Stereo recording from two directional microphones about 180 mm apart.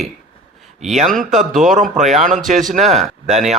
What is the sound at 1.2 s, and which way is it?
A man's voice, 45° right (ahead or behind).